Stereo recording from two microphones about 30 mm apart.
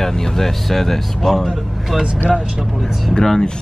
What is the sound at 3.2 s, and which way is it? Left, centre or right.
Speech, left.